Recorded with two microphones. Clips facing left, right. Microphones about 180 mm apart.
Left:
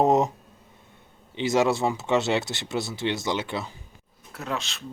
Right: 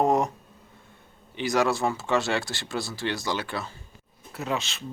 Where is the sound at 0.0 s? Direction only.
20° left (ahead or behind).